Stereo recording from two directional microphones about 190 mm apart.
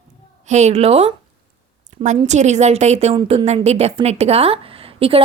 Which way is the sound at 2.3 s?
35° right (ahead or behind).